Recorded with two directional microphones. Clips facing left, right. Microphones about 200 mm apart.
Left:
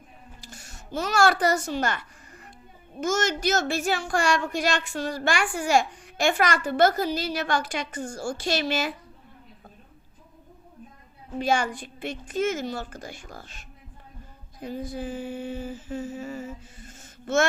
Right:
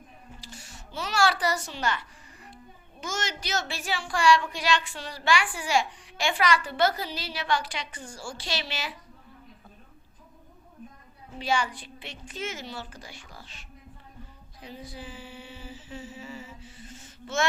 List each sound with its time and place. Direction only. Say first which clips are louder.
0.4 s a sound: left 1 dB; 50° left (ahead or behind)
3.0 s a woman's voice: left 9 dB; 45° left (ahead or behind)
11.3 s a woman's voice: left 4 dB; 50° left (ahead or behind)
14.6 s humming: left 9 dB; 50° left (ahead or behind)